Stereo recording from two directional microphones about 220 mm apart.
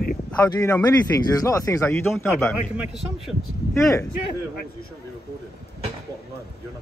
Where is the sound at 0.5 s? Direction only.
10° left (ahead or behind).